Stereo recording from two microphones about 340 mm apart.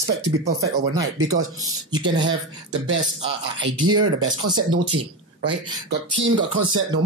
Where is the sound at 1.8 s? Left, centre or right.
Centre.